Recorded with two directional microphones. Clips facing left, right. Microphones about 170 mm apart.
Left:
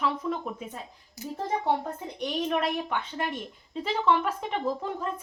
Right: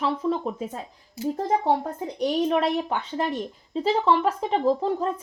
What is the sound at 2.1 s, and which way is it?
Speech, 35° right (ahead or behind).